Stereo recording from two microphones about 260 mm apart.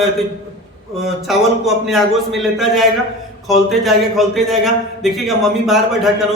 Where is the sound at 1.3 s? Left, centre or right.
Centre.